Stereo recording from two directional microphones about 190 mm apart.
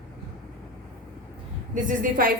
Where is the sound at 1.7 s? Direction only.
45° right (ahead or behind).